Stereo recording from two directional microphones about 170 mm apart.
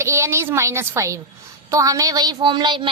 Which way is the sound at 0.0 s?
15° right (ahead or behind).